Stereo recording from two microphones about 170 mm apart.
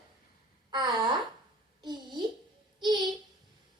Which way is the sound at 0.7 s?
25° right (ahead or behind).